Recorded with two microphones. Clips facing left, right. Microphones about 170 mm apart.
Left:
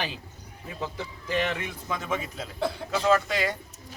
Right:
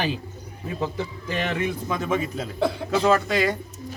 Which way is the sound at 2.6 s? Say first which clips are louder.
Right 5 dB; 85° right.